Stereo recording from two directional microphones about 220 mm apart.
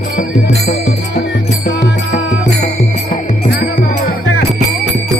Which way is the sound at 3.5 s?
40° left (ahead or behind).